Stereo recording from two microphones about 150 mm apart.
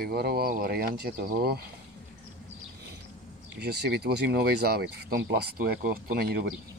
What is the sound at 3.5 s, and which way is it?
Speech, 90° right.